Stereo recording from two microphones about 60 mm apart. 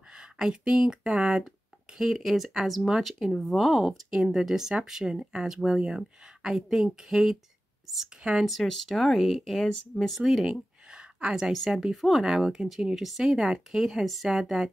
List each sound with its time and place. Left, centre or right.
0.1 s speech: centre
8.2 s speech: centre
8.5 s speech: centre
10.9 s a sound: centre
11.5 s speech: centre